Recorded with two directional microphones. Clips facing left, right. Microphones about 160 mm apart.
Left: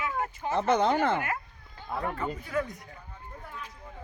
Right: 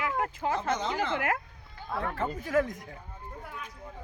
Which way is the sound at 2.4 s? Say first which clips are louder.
Right 8 dB; 90° right.